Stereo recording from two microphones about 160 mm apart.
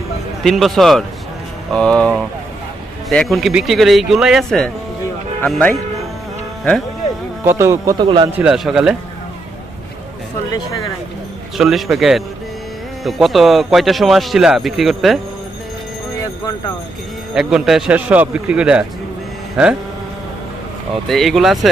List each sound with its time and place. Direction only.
0.4 s speech: centre (ahead or behind)
7.4 s speech: 15° right (ahead or behind)
8.0 s speech: 30° right (ahead or behind)
8.4 s speech: 5° right (ahead or behind)
11.5 s speech: centre (ahead or behind)
17.3 s speech: centre (ahead or behind)
21.1 s speech: centre (ahead or behind)